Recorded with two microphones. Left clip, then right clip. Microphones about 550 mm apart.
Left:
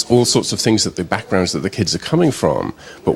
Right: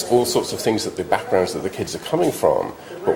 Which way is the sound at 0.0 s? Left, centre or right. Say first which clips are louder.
Left 3 dB; left.